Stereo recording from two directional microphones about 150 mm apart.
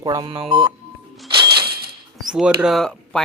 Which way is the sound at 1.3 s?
35° right (ahead or behind).